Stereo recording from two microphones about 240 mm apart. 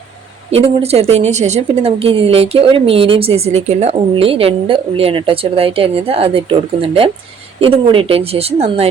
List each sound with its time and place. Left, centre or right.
0.5 s a woman's voice: right